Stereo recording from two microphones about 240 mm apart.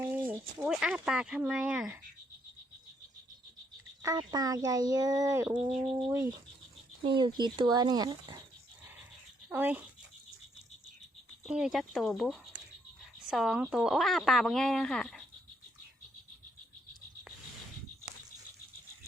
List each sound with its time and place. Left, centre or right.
0.0 s speech: centre
4.0 s speech: centre
5.7 s speech: right
6.0 s speech: centre
7.0 s speech: centre
9.5 s speech: centre
11.4 s speech: centre